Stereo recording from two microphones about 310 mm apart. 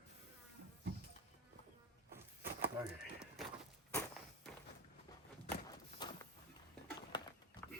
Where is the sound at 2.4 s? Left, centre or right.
Right.